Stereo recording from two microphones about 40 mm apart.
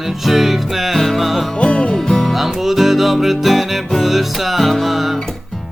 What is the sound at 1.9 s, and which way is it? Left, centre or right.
Music, centre.